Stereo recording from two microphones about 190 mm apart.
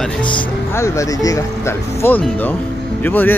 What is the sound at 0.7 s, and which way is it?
Speech, 15° left (ahead or behind).